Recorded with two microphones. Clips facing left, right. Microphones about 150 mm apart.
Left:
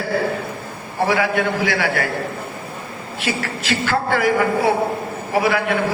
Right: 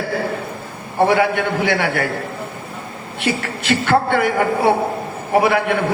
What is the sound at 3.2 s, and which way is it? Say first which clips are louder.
A man's voice: right 3 dB; 55° right (ahead or behind).